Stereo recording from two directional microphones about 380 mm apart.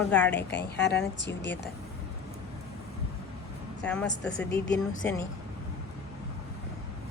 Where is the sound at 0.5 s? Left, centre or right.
Left.